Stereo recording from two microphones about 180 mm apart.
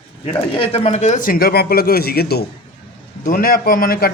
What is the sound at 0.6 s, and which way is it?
Speech, 35° left (ahead or behind).